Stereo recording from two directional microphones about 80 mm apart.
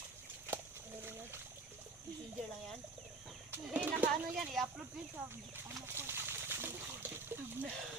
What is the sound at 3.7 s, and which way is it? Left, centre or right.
Speech, centre.